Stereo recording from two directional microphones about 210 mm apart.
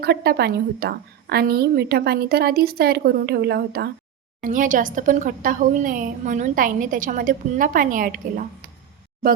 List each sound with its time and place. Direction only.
0.0 s a woman's voice: 50° right (ahead or behind)